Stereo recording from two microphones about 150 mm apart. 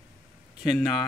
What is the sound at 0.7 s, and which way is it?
Speech, centre (ahead or behind).